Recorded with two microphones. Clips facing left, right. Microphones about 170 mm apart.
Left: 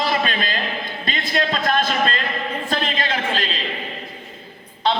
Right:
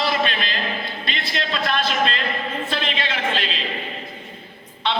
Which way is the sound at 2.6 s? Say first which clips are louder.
Left 2 dB; 45° left (ahead or behind).